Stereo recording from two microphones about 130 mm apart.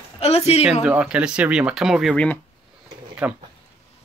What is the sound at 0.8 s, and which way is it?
Speech, 10° right (ahead or behind).